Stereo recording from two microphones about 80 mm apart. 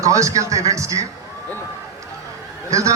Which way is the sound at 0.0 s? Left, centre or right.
Right.